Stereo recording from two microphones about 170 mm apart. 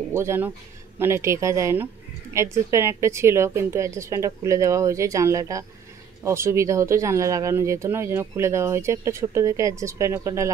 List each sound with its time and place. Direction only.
0.1 s speech: 15° right (ahead or behind)